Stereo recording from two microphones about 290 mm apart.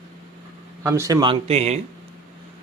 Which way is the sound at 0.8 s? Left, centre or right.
Centre.